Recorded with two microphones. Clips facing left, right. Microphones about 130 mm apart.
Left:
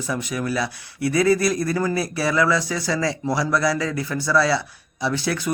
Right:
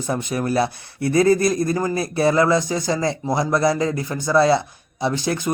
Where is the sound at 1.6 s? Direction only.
20° right (ahead or behind).